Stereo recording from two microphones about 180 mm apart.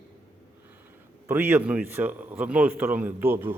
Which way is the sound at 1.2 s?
10° right (ahead or behind).